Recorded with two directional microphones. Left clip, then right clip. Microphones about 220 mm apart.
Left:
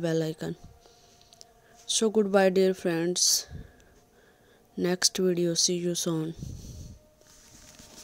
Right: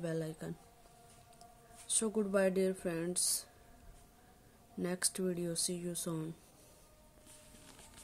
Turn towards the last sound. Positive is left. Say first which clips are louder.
# left 12 dB
turn(degrees=30)  # may be behind; listen again after turning